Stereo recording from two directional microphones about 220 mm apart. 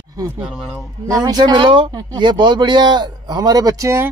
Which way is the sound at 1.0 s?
15° right (ahead or behind).